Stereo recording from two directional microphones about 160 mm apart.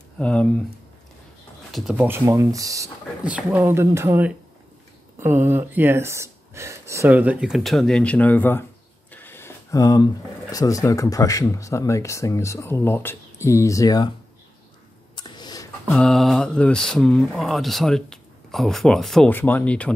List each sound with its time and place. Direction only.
0.2 s speech: 5° left (ahead or behind)
1.7 s speech: centre (ahead or behind)
2.0 s speech: 15° right (ahead or behind)
3.3 s speech: 10° right (ahead or behind); by 8.6 s 10° left (ahead or behind)
9.1 s a sound: 15° left (ahead or behind)
10.5 s speech: 20° left (ahead or behind)
15.1 s a sound: 25° left (ahead or behind)
15.9 s speech: 5° left (ahead or behind)